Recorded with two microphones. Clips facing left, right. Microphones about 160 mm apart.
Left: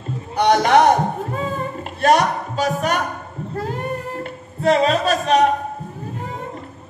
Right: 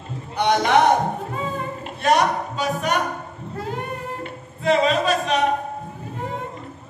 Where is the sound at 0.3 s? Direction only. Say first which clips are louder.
Left 4 dB; 45° left (ahead or behind).